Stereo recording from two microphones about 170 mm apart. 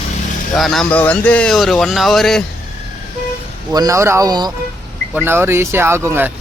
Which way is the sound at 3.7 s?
20° right (ahead or behind).